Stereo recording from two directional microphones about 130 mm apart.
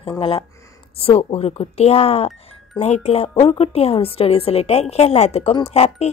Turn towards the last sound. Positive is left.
turn(degrees=55)  # may be behind; listen again after turning